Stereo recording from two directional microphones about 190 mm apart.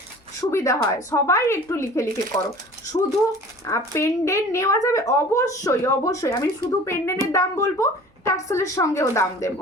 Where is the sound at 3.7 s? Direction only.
15° left (ahead or behind).